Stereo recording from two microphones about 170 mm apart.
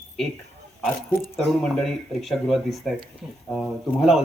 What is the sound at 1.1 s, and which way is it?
Speech, 55° left (ahead or behind).